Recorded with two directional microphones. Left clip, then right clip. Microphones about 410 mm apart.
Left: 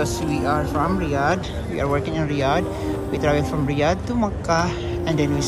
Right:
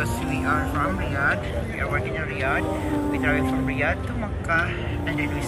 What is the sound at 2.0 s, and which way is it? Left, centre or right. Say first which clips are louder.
Speech: left 4 dB; centre.